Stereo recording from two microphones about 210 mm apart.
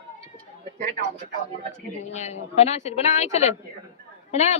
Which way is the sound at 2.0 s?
35° left (ahead or behind).